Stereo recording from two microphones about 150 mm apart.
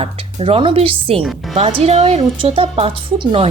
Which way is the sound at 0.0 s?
40° right (ahead or behind).